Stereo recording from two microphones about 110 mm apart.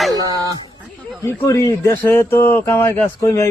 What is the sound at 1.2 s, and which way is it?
Speech, 25° left (ahead or behind).